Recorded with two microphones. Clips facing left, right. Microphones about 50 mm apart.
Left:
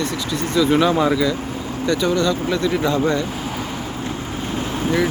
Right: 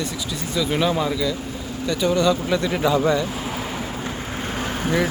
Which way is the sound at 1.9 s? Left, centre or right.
Centre.